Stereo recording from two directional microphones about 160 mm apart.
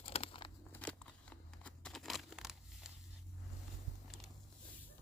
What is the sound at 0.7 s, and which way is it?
Crackle, 5° left (ahead or behind).